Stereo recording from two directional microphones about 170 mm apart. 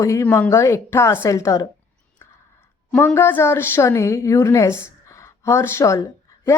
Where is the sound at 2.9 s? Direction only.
15° left (ahead or behind).